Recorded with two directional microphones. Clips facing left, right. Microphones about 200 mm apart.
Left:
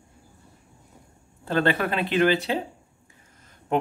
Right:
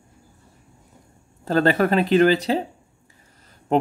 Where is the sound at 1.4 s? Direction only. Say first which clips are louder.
Right 5 dB; 40° right (ahead or behind).